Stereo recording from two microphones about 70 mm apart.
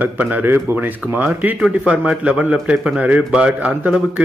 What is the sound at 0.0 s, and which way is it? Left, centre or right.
A man's voice, right.